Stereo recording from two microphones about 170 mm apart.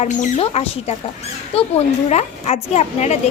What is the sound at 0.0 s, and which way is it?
A woman's voice, 40° left (ahead or behind).